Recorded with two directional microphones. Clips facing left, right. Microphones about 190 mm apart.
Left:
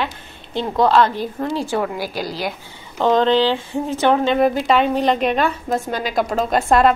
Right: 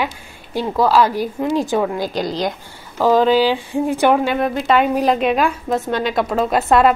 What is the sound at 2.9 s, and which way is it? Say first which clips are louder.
A woman's voice: right 2 dB; 5° right (ahead or behind).